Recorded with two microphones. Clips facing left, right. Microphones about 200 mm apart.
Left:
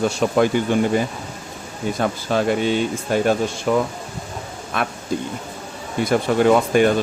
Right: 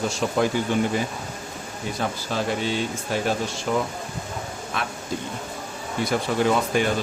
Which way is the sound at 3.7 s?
65° left (ahead or behind).